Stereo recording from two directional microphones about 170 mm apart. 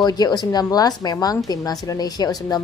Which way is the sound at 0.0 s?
25° left (ahead or behind).